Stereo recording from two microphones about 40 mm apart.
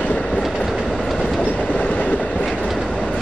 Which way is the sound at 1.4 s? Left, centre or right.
Left.